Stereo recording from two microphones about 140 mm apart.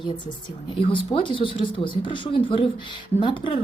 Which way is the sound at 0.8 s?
40° left (ahead or behind).